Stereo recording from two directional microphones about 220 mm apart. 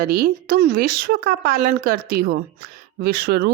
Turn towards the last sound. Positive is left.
turn(degrees=-45)  # may be behind; listen again after turning